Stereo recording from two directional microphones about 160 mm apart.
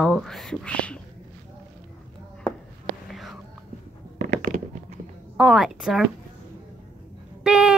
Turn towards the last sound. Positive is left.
turn(degrees=-5)  # may be behind; listen again after turning